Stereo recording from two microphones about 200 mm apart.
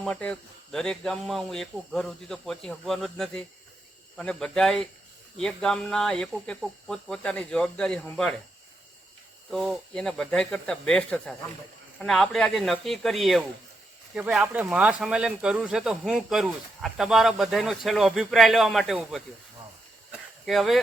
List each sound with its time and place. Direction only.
0.0 s speech: 5° left (ahead or behind)
9.5 s speech: centre (ahead or behind)
20.4 s speech: centre (ahead or behind)